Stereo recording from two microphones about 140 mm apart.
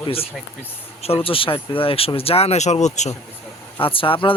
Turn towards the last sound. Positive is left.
turn(degrees=40)  # may be behind; listen again after turning